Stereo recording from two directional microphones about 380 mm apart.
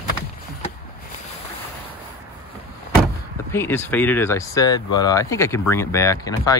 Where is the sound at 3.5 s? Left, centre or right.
Centre.